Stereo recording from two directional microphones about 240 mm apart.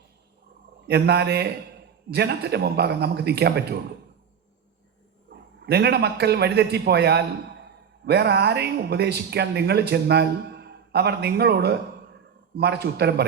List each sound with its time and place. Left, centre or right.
0.9 s a man's voice: right
5.3 s a man's voice: right